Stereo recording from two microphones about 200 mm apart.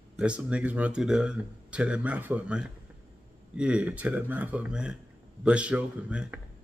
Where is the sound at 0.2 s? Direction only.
5° right (ahead or behind).